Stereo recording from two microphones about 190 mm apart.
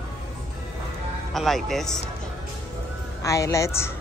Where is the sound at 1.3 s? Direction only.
Centre (ahead or behind).